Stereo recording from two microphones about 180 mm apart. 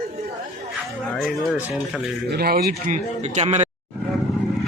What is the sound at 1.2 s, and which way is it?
Speech, 5° right (ahead or behind).